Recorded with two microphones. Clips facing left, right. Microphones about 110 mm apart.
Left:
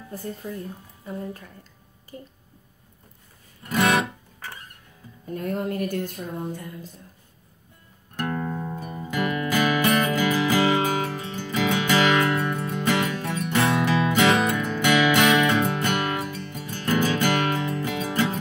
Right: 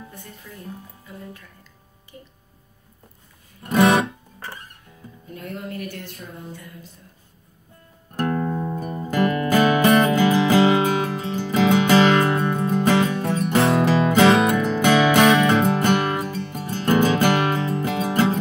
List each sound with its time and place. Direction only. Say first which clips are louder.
0.1 s a woman's voice: left 9 dB; 35° left (ahead or behind)
3.6 s music: right 5 dB; 30° right (ahead or behind)
5.3 s speech: left 6 dB; 45° left (ahead or behind)
8.5 s music: right 5 dB; 15° right (ahead or behind)
8.7 s music: right 5 dB; 45° right (ahead or behind)